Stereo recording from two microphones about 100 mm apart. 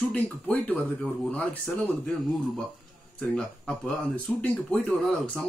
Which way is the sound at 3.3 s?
10° left (ahead or behind).